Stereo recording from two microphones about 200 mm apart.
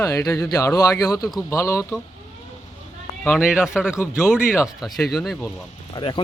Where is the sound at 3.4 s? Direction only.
5° right (ahead or behind).